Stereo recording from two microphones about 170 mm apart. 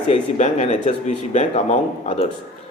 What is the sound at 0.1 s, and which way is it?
A man's voice, 40° left (ahead or behind).